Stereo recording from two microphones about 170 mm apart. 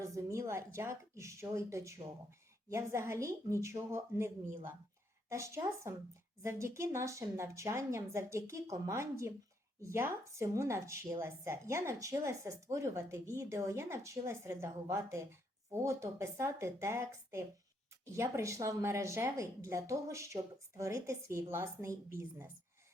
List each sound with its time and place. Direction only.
0.0 s a woman's voice: 20° right (ahead or behind)